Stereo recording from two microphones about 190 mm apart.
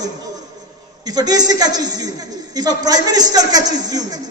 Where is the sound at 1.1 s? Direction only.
20° right (ahead or behind).